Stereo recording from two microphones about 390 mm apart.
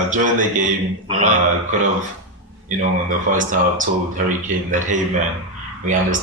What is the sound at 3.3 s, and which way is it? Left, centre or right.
Speech, centre.